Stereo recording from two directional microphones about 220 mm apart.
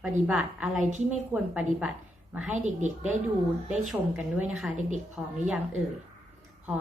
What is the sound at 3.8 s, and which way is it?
A woman's voice, 5° right (ahead or behind).